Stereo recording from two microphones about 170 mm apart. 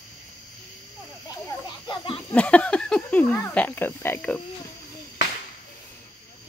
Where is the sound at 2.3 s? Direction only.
5° left (ahead or behind).